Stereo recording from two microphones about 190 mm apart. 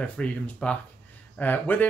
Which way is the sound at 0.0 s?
5° left (ahead or behind).